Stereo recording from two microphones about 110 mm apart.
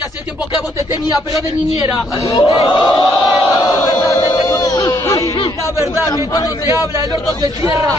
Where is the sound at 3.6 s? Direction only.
30° left (ahead or behind).